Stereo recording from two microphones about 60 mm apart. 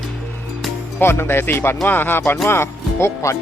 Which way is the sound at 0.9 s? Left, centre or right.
Left.